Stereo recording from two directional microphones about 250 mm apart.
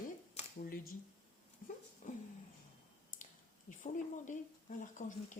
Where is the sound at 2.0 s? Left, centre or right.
Left.